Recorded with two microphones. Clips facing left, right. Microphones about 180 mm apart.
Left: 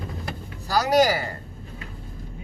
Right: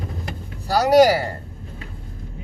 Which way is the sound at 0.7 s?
65° right (ahead or behind).